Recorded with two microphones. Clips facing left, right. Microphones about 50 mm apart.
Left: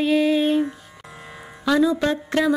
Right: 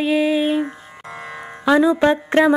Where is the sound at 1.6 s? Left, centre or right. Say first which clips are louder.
Right 4 dB; right.